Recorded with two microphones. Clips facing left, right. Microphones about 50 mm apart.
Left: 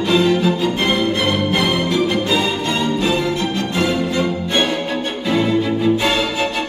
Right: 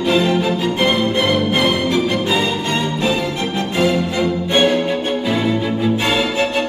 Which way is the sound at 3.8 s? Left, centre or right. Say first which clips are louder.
Right 2 dB; centre.